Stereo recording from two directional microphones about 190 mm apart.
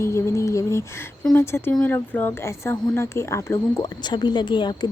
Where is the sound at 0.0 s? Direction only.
15° left (ahead or behind).